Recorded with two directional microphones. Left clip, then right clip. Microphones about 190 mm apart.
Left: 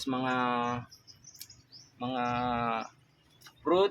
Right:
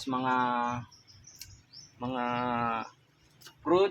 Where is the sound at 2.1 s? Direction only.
10° left (ahead or behind).